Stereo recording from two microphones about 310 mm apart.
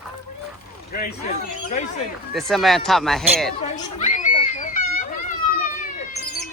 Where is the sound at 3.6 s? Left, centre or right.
Left.